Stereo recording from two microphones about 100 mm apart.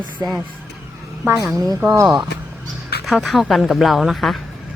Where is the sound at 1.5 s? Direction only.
35° right (ahead or behind).